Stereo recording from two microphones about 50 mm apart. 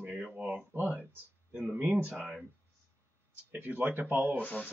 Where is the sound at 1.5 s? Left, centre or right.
Centre.